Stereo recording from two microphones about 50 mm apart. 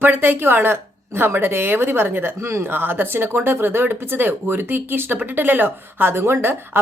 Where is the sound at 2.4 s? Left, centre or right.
Right.